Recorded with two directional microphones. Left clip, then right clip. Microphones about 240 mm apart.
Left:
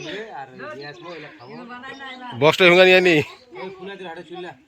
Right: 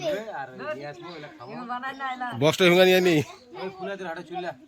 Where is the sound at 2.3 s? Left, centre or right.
Centre.